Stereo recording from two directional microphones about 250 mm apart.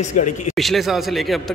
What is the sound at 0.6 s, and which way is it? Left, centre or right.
Speech, centre.